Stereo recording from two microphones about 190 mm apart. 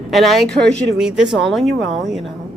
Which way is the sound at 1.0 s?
5° right (ahead or behind).